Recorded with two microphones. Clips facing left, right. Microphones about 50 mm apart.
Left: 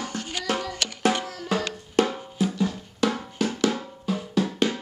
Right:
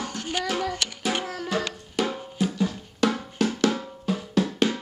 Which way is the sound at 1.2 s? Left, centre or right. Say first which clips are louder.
Right 2 dB; centre.